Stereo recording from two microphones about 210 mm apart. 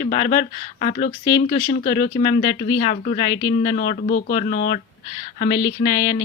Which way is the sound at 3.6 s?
45° left (ahead or behind).